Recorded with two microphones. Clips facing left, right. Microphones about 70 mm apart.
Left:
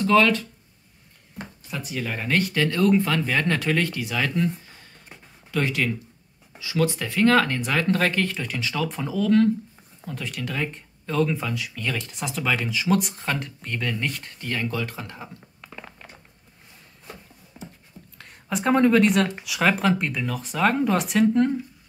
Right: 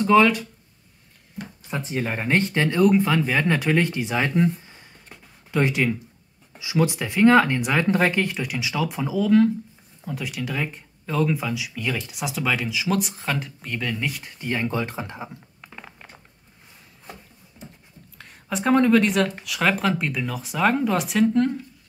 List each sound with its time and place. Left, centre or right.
0.0 s speech: centre
1.4 s a sound: left
1.7 s speech: right; by 14.5 s centre
14.5 s speech: right
15.6 s a sound: centre
18.1 s speech: centre